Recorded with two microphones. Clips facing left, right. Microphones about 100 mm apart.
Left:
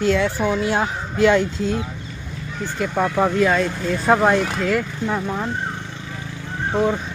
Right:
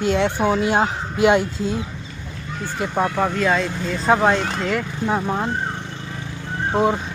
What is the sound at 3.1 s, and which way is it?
Speech, 5° left (ahead or behind).